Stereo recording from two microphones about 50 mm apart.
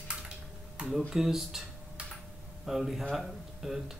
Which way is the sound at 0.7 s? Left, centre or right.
Centre.